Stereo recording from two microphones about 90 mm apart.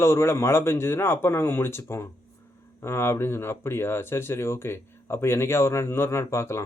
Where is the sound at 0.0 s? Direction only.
30° left (ahead or behind).